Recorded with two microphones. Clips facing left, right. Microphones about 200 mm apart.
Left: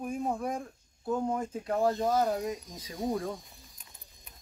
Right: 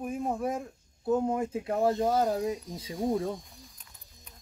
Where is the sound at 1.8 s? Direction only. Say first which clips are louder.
Right 1 dB; 25° right (ahead or behind).